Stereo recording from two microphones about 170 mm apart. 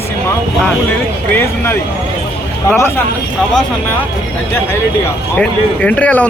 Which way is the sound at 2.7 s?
10° left (ahead or behind).